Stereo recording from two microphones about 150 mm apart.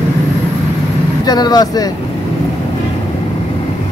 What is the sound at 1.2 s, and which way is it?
Speech, 25° left (ahead or behind).